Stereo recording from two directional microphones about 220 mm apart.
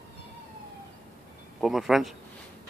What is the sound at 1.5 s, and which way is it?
Speech, centre (ahead or behind).